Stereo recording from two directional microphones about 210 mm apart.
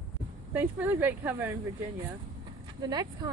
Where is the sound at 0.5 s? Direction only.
10° right (ahead or behind).